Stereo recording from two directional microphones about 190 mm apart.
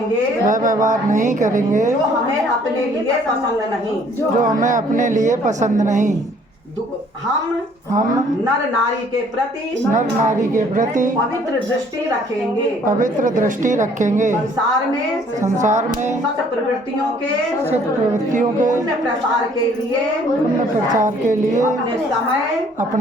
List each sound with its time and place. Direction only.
0.4 s a woman's voice: 45° right (ahead or behind)
4.4 s a woman's voice: 45° right (ahead or behind)
9.9 s a woman's voice: 40° right (ahead or behind)
12.8 s a woman's voice: 45° right (ahead or behind)
15.4 s a woman's voice: 40° right (ahead or behind)
18.3 s a woman's voice: 45° right (ahead or behind)
20.9 s a woman's voice: 40° right (ahead or behind)